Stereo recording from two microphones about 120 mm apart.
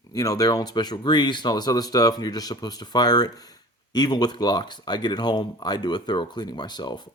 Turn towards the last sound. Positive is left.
turn(degrees=35)  # may be behind; listen again after turning